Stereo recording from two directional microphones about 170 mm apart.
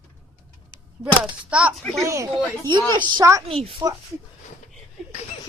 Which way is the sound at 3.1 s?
20° right (ahead or behind).